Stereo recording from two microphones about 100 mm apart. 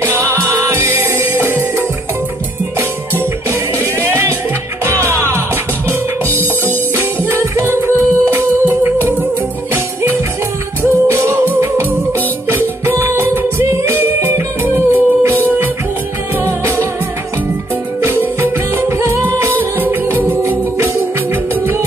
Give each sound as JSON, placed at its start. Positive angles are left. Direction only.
{"t": 0.7, "sound": "music", "side_deg": -20}
{"t": 4.8, "sound": "music", "side_deg": -25}
{"t": 7.0, "sound": "music", "side_deg": -25}
{"t": 10.8, "sound": "music", "side_deg": -25}
{"t": 18.4, "sound": "music", "side_deg": -25}